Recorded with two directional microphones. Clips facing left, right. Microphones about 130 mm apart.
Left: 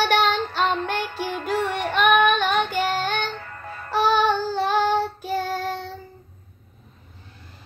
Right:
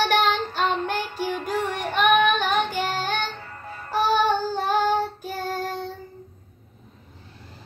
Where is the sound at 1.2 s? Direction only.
50° left (ahead or behind).